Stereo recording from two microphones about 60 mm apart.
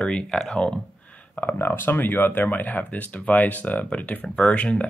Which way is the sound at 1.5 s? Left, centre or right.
Left.